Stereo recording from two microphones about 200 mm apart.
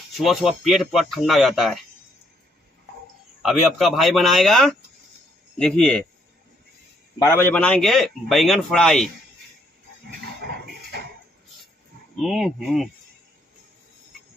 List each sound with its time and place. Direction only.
0.2 s a man's voice: centre (ahead or behind)
3.4 s a man's voice: centre (ahead or behind)
7.2 s a man's voice: 15° left (ahead or behind)
10.5 s music: 50° right (ahead or behind)
12.2 s a man's voice: centre (ahead or behind)